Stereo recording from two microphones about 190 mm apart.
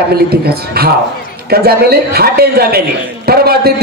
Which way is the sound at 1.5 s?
55° right (ahead or behind).